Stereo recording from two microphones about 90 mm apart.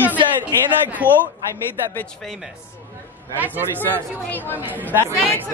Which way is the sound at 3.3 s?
20° right (ahead or behind).